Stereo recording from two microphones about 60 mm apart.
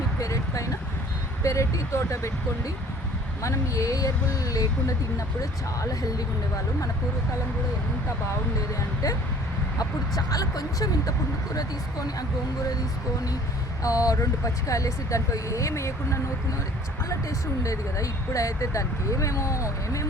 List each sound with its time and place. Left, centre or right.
0.2 s a sound: left
1.5 s speech: left
3.4 s speech: left
9.7 s speech: left
13.8 s speech: left